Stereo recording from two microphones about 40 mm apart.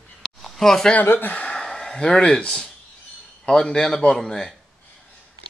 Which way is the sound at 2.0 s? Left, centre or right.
Centre.